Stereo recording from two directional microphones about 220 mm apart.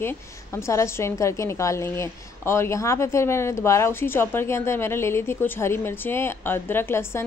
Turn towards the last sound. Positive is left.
turn(degrees=10)  # may be behind; listen again after turning